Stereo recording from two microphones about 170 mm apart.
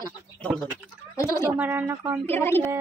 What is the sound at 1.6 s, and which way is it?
Speech, 10° right (ahead or behind).